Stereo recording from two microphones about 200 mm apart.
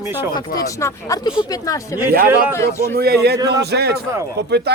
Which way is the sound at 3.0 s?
55° right (ahead or behind).